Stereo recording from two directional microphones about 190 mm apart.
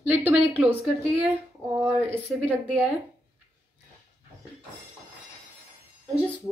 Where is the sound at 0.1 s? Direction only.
10° right (ahead or behind).